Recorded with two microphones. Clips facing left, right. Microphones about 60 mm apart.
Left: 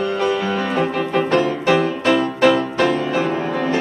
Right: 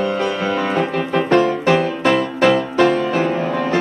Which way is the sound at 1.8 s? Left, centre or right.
Right.